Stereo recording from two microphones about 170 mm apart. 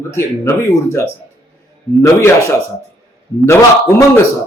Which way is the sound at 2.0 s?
15° left (ahead or behind).